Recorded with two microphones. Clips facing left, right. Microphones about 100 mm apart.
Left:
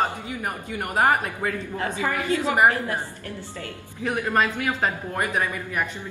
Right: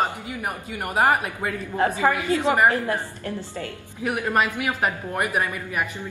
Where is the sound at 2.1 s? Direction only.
25° right (ahead or behind).